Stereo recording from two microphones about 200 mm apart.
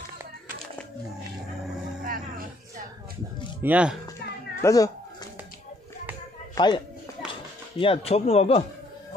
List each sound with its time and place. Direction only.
2.0 s music: 45° right (ahead or behind)
3.6 s speech: 5° right (ahead or behind)
4.6 s cat: 15° left (ahead or behind)
6.5 s speech: 20° left (ahead or behind)
7.8 s speech: 30° left (ahead or behind)